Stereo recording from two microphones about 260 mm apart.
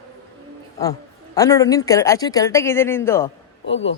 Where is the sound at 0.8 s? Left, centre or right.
Centre.